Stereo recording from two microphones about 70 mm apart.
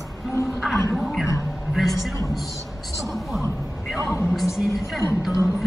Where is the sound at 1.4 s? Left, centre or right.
Centre.